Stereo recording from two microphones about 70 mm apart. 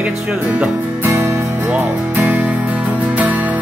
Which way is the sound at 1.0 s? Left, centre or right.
Right.